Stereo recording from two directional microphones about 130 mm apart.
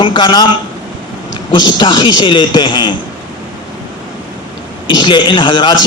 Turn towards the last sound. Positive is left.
turn(degrees=35)  # may be behind; listen again after turning